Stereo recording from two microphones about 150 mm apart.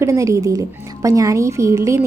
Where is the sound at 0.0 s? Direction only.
20° right (ahead or behind).